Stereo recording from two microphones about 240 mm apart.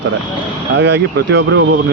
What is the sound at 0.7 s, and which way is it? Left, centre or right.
Speech, right.